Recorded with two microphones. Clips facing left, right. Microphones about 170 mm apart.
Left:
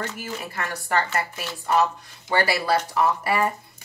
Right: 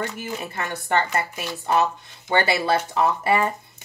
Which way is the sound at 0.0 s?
20° right (ahead or behind).